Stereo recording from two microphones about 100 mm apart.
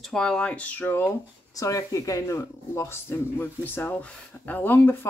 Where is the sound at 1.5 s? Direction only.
35° left (ahead or behind).